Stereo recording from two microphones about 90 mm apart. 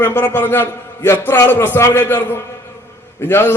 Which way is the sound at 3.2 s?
25° left (ahead or behind).